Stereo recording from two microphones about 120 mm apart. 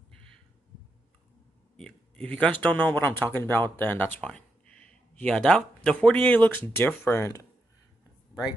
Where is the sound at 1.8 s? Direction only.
5° left (ahead or behind); by 7.4 s 25° left (ahead or behind).